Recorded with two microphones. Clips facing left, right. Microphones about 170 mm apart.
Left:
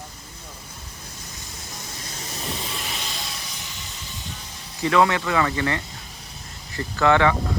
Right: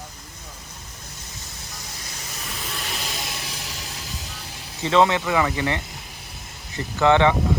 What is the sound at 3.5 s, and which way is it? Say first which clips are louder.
Vehicle: right 3 dB; 80° right.